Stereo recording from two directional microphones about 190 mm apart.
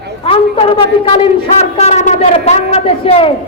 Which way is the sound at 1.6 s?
35° left (ahead or behind).